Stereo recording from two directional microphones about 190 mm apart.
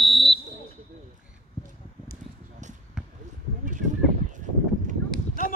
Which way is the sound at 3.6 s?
40° right (ahead or behind).